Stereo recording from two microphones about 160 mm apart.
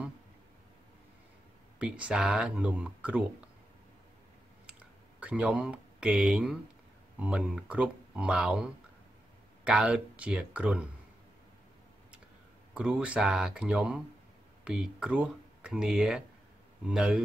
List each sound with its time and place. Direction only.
1.8 s speech: 5° right (ahead or behind)
4.6 s a sound: 5° right (ahead or behind)
7.2 s speech: 5° right (ahead or behind)
9.7 s speech: 5° right (ahead or behind)
12.7 s speech: 5° right (ahead or behind)